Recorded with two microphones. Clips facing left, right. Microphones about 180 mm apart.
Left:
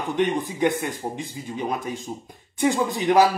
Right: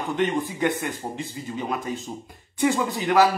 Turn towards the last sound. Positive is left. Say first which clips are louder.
# left 2 dB
turn(degrees=15)  # may be behind; listen again after turning